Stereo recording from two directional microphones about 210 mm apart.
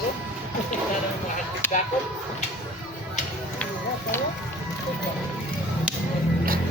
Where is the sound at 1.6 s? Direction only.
10° left (ahead or behind).